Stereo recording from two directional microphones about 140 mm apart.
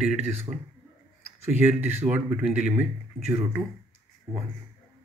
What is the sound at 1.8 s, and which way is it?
Speech, 15° right (ahead or behind).